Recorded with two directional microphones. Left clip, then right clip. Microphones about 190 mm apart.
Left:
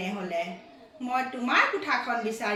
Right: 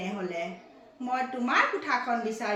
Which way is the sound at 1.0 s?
60° right (ahead or behind).